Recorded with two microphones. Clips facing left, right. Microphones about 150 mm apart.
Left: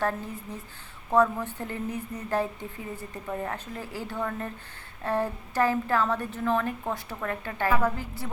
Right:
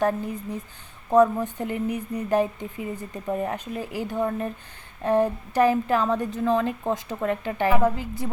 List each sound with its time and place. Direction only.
1.1 s a woman's voice: 15° right (ahead or behind)